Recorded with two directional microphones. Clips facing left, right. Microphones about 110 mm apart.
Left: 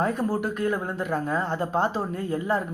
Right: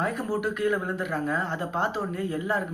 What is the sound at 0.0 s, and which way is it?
Speech, 35° left (ahead or behind).